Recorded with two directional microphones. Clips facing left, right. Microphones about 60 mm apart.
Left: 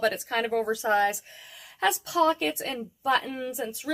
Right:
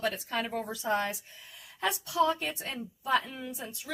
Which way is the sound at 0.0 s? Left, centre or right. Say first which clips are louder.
Left 6 dB; left.